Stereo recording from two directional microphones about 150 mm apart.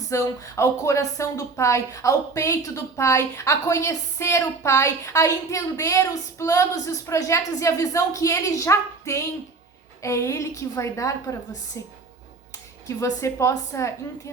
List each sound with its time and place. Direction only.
0.1 s a woman's voice: 20° left (ahead or behind)
13.0 s a woman's voice: 20° left (ahead or behind)